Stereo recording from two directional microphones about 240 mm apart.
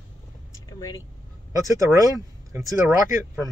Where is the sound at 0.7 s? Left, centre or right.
Centre.